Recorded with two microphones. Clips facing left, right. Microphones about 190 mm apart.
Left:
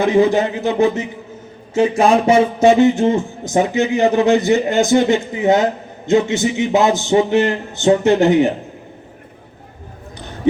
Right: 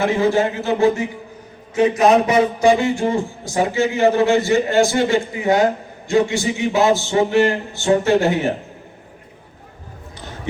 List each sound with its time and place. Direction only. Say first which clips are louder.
0.0 s a man's voice: left 3 dB; 20° left (ahead or behind)